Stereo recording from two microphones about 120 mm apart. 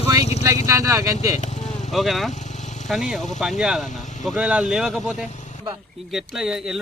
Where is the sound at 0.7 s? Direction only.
25° right (ahead or behind).